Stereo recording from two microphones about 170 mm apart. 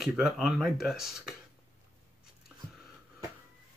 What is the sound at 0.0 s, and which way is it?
Speech, centre (ahead or behind).